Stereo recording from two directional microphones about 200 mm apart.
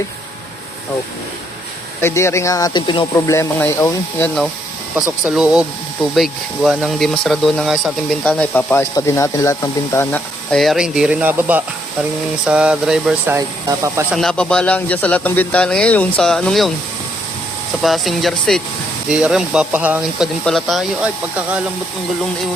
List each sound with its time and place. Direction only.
2.0 s speech: 10° left (ahead or behind)
5.2 s speech: 5° right (ahead or behind)
14.1 s speech: centre (ahead or behind)
17.8 s speech: centre (ahead or behind)